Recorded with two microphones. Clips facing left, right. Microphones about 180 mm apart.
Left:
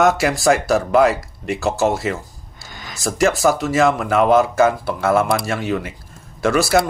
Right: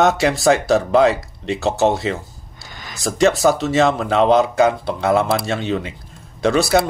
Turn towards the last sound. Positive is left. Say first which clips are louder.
# right 1 dB
turn(degrees=-25)  # may be behind; listen again after turning